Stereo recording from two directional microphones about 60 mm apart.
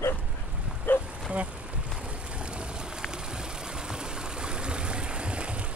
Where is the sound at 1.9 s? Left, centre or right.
Centre.